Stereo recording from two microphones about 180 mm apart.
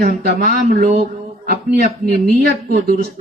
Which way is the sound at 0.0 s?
60° right (ahead or behind).